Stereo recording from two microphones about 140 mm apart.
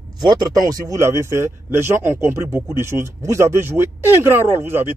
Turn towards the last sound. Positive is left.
turn(degrees=-15)  # may be behind; listen again after turning